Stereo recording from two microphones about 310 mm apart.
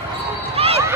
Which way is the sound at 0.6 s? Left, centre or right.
Centre.